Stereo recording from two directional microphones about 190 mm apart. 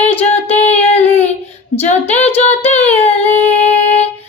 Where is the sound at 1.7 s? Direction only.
35° left (ahead or behind).